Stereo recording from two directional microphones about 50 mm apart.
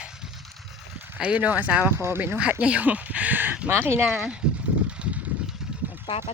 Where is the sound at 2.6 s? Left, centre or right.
Right.